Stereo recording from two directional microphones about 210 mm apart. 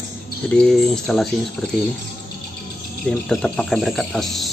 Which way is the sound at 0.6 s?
Centre (ahead or behind).